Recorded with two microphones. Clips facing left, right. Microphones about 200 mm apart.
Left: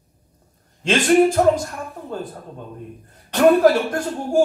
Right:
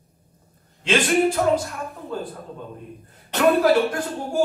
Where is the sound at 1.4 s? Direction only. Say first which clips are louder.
Left 5 dB; 40° left (ahead or behind).